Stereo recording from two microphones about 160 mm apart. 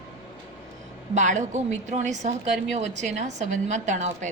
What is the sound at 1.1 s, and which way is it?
A woman's voice, 50° right (ahead or behind).